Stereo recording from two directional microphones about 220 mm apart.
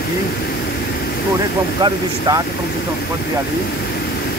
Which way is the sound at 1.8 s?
15° right (ahead or behind).